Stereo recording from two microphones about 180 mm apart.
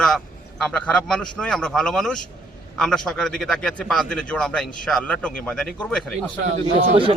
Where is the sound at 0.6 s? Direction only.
5° left (ahead or behind).